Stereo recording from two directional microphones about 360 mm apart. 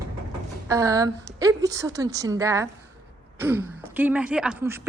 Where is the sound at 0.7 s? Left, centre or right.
Centre.